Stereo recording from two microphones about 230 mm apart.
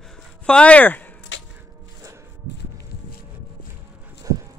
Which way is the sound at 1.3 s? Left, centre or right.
Left.